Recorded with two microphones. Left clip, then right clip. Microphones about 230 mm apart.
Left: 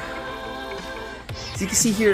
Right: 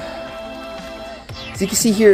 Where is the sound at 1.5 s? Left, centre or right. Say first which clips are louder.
Right 5 dB; centre.